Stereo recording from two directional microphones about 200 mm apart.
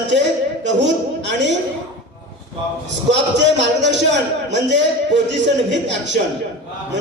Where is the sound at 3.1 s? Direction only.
60° right (ahead or behind).